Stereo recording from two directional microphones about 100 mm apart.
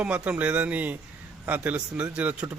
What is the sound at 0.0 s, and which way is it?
A man's voice, 15° right (ahead or behind).